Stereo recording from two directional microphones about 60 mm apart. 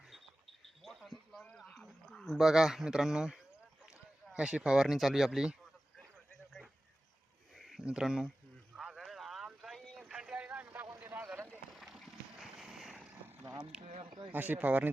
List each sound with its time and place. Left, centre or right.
0.8 s a sound: centre
1.7 s dog: centre
2.4 s speech: centre
7.5 s a sound: centre
7.8 s speech: centre
8.8 s vehicle: centre
10.0 s vehicle: centre
11.1 s vehicle: right
11.7 s vehicle: centre
12.4 s a sound: centre
13.7 s a sound: centre
14.3 s speech: right